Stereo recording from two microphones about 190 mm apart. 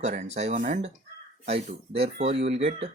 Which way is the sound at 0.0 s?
40° right (ahead or behind).